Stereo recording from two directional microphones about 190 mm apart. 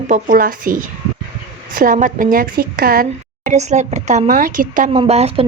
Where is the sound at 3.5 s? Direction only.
40° right (ahead or behind).